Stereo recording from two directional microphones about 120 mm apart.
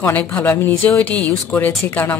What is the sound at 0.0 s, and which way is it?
A woman's voice, 15° left (ahead or behind).